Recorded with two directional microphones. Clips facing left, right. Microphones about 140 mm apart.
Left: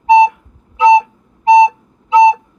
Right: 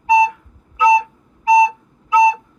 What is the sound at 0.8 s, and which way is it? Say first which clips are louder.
Flute: left 5 dB; 25° left (ahead or behind).